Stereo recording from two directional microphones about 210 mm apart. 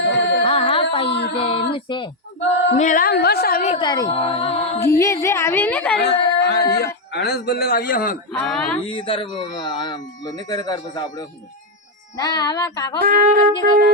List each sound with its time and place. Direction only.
0.1 s music: 55° left (ahead or behind)
0.4 s music: 25° left (ahead or behind)
1.3 s child singing: 25° left (ahead or behind)
1.7 s speech: 20° left (ahead or behind)
2.7 s speech: 40° left (ahead or behind)
3.8 s speech: 20° left (ahead or behind)
4.4 s a capella: 30° left (ahead or behind)
4.9 s a woman's voice: 15° left (ahead or behind)
6.1 s speech: 50° left (ahead or behind)
8.3 s speech: 5° left (ahead or behind)
8.9 s a woman's voice: 25° left (ahead or behind)
13.0 s wind instrument: 45° right (ahead or behind)